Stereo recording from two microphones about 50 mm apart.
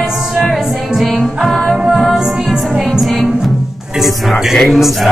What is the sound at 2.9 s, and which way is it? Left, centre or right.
Music, centre.